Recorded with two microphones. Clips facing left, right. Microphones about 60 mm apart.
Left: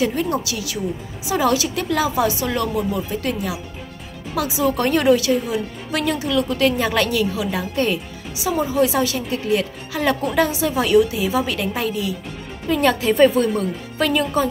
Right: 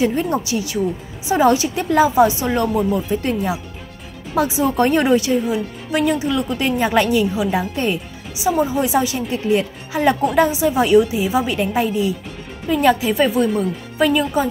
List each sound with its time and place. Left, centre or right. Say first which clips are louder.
0.0 s a woman's voice: right 2 dB; right
12.6 s a woman's voice: right 2 dB; centre